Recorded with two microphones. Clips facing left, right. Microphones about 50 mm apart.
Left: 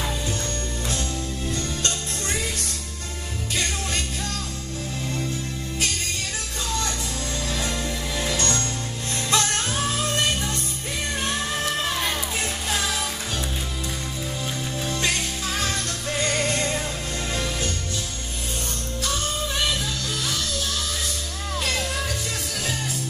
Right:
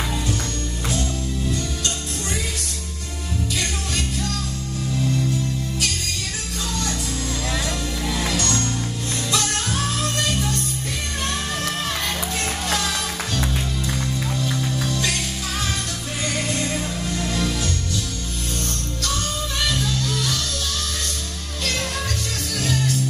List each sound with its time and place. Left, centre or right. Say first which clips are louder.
3.5 s music: left 3 dB; left
8.3 s music: right 2 dB; left
14.9 s music: left 3 dB; left
16.2 s music: left 1 dB; left
22.6 s music: right 8 dB; centre